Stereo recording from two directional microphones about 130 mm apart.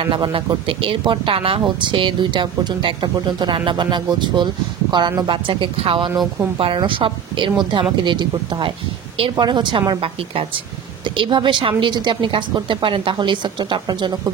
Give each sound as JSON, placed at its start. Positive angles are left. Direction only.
{"t": 0.1, "sound": "a woman's voice", "side_deg": -40}